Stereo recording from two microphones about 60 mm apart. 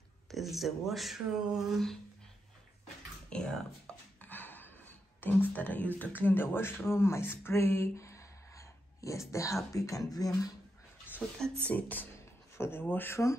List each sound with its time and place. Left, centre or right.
0.3 s speech: centre
3.3 s speech: centre
4.2 s a sound: left
5.2 s speech: left
6.9 s speech: left
7.9 s a sound: left
9.3 s speech: left
11.4 s speech: centre
11.7 s speech: left
12.5 s speech: left
13.1 s speech: left